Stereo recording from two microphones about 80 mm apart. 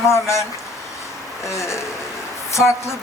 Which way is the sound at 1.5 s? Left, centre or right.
Left.